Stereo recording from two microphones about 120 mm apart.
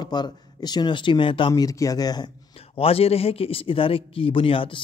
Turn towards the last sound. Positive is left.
turn(degrees=50)  # may be behind; listen again after turning